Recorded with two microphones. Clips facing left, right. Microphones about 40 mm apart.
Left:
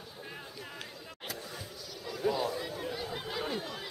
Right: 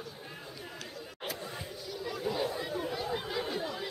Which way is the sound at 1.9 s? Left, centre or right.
Centre.